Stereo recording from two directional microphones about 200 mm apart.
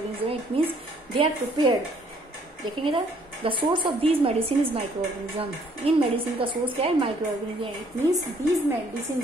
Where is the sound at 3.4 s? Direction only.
25° right (ahead or behind).